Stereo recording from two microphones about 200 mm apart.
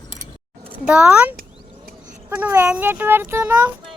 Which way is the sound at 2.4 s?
10° right (ahead or behind).